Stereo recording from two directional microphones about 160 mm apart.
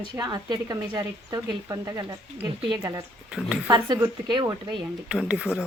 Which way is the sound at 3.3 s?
5° right (ahead or behind).